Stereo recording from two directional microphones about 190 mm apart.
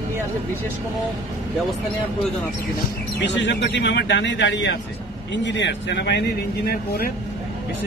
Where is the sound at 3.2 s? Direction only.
65° left (ahead or behind).